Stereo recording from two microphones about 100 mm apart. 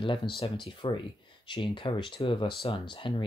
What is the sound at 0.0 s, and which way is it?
Speech, 55° left (ahead or behind).